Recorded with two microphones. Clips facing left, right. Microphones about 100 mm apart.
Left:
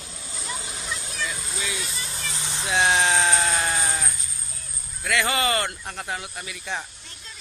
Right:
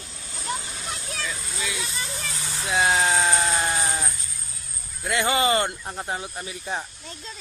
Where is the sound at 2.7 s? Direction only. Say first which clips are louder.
Even; 5° right (ahead or behind); by 6.8 s 35° right (ahead or behind).